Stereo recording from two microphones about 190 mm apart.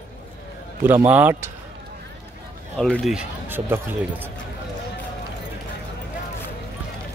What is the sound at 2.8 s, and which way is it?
Speech, centre (ahead or behind).